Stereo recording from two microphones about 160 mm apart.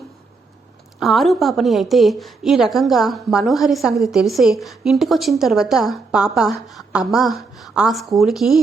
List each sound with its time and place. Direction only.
0.9 s a woman's voice: centre (ahead or behind)